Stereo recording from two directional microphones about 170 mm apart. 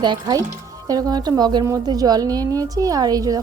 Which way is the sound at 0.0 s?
25° right (ahead or behind).